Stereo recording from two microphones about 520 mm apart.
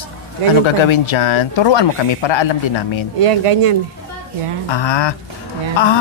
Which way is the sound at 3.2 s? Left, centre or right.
Right.